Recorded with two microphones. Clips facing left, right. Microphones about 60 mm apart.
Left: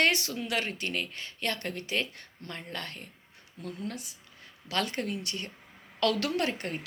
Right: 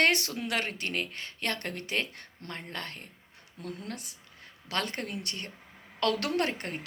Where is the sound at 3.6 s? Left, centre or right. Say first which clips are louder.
Left 2 dB; right.